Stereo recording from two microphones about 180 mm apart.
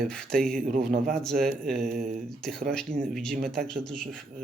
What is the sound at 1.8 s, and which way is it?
Speech, 55° right (ahead or behind).